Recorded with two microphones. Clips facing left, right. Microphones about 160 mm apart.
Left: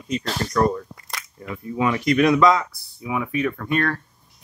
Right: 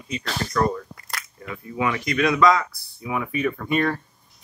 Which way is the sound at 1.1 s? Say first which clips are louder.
Left 1 dB; centre (ahead or behind).